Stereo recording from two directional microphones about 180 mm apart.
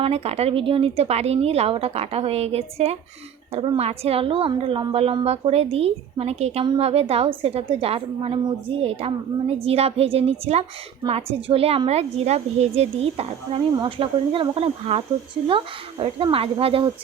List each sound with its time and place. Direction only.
0.0 s a woman's voice: 35° right (ahead or behind)